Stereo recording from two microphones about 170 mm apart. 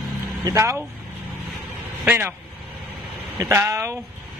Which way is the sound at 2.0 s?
10° right (ahead or behind).